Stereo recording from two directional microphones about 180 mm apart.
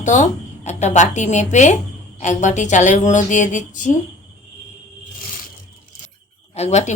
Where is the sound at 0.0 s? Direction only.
45° left (ahead or behind).